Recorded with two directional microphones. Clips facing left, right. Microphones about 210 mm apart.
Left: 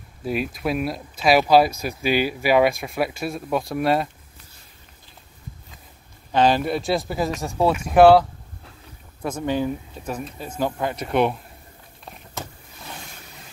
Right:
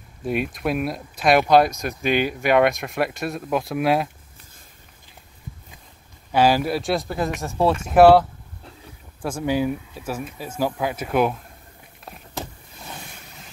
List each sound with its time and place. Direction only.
0.2 s speech: centre (ahead or behind)
6.3 s speech: 5° right (ahead or behind)